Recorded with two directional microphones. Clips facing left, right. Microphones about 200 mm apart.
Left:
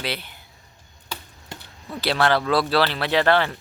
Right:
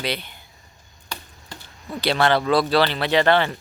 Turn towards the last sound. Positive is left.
turn(degrees=0)  # may be behind; listen again after turning